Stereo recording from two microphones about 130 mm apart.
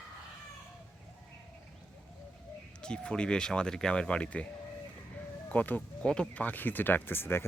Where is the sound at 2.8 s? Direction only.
5° left (ahead or behind).